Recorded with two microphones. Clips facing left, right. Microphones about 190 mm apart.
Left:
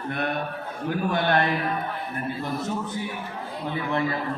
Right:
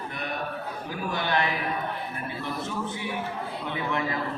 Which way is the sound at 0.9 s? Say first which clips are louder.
Left 5 dB; 55° left (ahead or behind).